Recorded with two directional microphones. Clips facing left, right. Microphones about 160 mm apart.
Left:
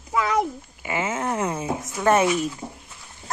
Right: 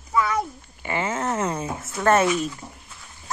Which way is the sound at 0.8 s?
10° left (ahead or behind).